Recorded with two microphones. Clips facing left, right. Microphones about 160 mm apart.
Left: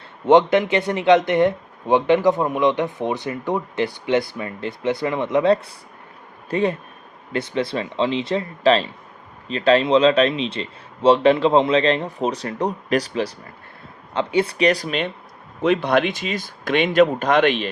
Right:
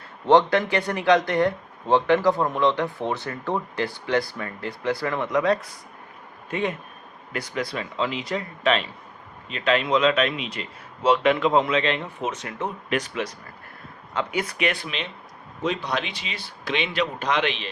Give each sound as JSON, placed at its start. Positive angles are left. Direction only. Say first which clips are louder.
{"t": 0.3, "sound": "speech", "louder": "left 4 dB", "side_deg": 20}
{"t": 15.6, "sound": "speech", "louder": "left 9 dB", "side_deg": 60}